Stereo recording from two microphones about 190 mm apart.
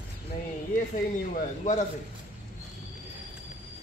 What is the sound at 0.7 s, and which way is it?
Speech, 45° left (ahead or behind).